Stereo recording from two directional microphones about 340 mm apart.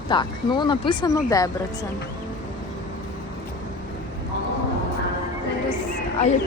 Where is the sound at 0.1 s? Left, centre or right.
Centre.